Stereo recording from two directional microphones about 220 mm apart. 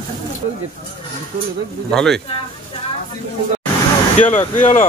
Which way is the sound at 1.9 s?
Centre (ahead or behind).